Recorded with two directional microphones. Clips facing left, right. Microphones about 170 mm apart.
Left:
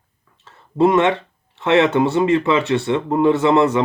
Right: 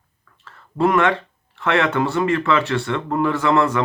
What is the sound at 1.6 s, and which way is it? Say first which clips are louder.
Speech: left 4 dB; 20° left (ahead or behind).